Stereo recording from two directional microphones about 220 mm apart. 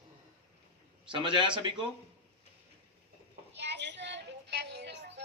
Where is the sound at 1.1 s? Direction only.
20° right (ahead or behind).